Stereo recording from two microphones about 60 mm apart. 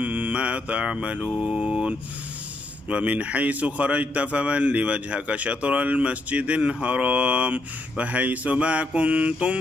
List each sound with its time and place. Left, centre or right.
0.0 s a man's voice: right